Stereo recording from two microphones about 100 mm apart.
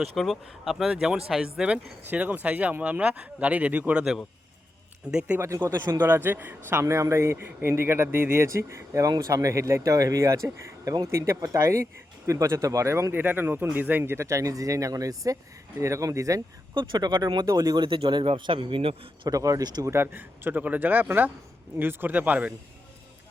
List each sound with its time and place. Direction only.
0.0 s speech: centre (ahead or behind)
5.0 s speech: 10° right (ahead or behind)
5.4 s speech: 30° right (ahead or behind)
6.0 s a man's voice: 20° right (ahead or behind)
14.0 s speech: 25° right (ahead or behind)
16.7 s speech: 50° right (ahead or behind)
17.4 s speech: 35° right (ahead or behind)
17.8 s a man's voice: 60° right (ahead or behind)
19.3 s speech: 35° right (ahead or behind)
19.9 s a man's voice: 20° right (ahead or behind)